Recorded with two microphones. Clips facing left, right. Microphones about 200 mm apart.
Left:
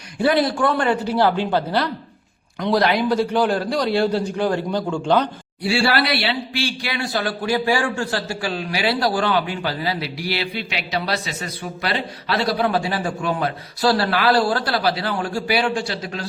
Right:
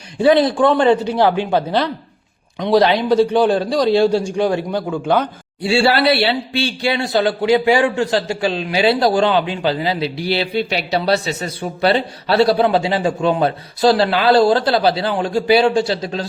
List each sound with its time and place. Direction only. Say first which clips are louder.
0.3 s a man's voice: right 6 dB; 25° right (ahead or behind)
4.9 s speech: right 2 dB; centre (ahead or behind)
5.6 s a man's voice: right 5 dB; 25° right (ahead or behind)